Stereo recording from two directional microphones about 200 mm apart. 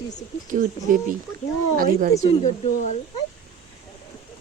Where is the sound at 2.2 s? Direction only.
35° left (ahead or behind).